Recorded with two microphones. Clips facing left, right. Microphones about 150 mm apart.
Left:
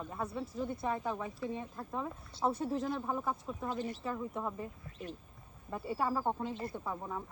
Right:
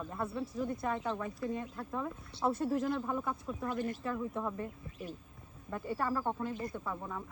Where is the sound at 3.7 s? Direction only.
50° right (ahead or behind).